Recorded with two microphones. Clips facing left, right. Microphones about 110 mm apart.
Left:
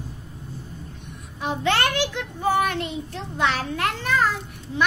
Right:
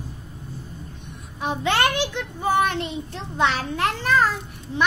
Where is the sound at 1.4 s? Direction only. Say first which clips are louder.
Right 1 dB; 20° right (ahead or behind).